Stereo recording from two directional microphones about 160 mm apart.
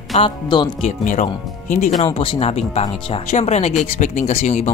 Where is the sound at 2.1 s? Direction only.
35° left (ahead or behind).